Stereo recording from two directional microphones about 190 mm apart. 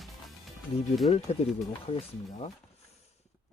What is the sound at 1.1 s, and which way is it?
Speech, 30° left (ahead or behind).